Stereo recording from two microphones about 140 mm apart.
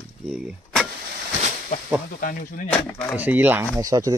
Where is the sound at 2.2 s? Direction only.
75° left (ahead or behind).